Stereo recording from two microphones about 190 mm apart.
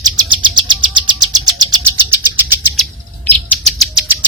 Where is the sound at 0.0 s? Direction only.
25° right (ahead or behind).